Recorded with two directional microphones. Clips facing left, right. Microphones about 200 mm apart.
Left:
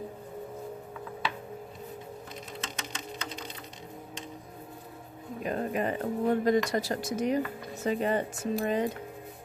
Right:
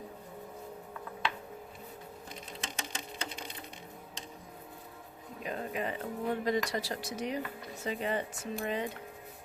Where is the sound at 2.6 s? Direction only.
30° right (ahead or behind).